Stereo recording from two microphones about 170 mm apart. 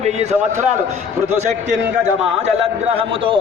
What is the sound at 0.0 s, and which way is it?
Speech, 40° right (ahead or behind).